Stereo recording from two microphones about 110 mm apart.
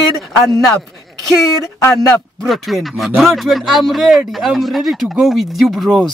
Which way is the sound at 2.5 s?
Centre (ahead or behind).